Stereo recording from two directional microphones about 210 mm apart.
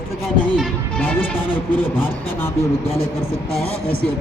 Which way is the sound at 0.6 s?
10° left (ahead or behind).